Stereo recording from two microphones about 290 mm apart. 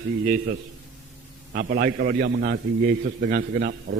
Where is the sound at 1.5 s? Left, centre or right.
Right.